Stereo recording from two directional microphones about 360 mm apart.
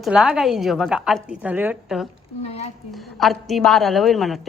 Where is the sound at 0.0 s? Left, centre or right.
Centre.